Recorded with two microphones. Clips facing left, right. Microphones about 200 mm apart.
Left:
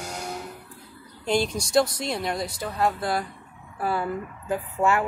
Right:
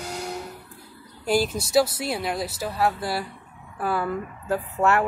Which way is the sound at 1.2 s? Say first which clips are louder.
Right 1 dB; 5° right (ahead or behind).